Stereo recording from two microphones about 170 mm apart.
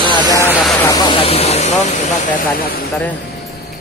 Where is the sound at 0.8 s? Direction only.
20° left (ahead or behind).